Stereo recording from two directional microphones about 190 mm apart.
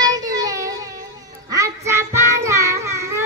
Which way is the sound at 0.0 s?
20° right (ahead or behind).